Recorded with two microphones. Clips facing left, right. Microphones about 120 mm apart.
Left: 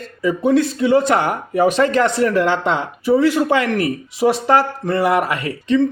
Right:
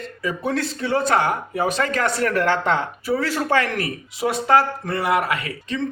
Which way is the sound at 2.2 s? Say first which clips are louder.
Left 4 dB; 15° left (ahead or behind).